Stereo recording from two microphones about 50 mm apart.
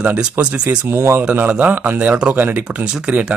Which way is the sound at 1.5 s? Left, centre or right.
Right.